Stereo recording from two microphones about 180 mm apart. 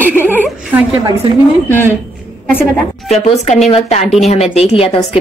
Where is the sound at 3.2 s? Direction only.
40° left (ahead or behind).